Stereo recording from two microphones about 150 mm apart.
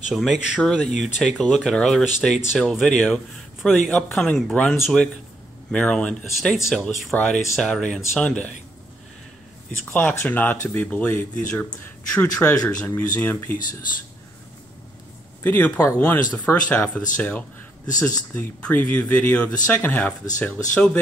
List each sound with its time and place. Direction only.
0.1 s speech: centre (ahead or behind)
9.8 s speech: 10° left (ahead or behind)
15.4 s speech: 10° left (ahead or behind)